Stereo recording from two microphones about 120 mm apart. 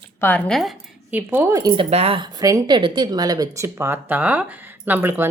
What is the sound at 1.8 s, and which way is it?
Speech, 60° right (ahead or behind).